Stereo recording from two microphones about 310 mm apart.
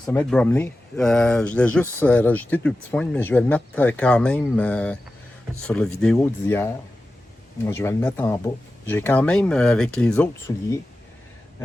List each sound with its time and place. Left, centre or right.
0.0 s speech: centre